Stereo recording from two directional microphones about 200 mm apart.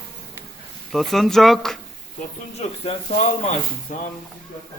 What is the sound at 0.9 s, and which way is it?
Speech, centre (ahead or behind).